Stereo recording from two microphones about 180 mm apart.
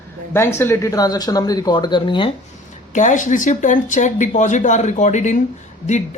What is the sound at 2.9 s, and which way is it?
Speech, 45° left (ahead or behind).